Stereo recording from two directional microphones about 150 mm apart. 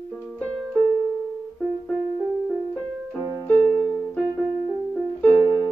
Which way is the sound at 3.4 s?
10° left (ahead or behind).